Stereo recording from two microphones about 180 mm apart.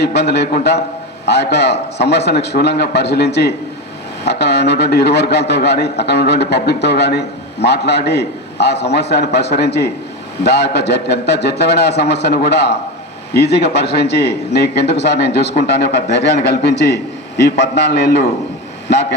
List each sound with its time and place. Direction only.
0.0 s a man's voice: 65° left (ahead or behind)